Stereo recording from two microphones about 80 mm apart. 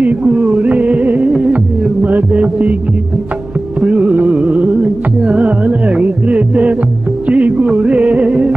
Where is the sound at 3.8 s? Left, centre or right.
Centre.